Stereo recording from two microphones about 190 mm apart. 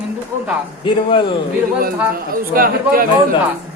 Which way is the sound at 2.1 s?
50° right (ahead or behind).